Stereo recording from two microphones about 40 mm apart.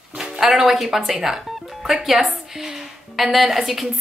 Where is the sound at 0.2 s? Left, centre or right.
Centre.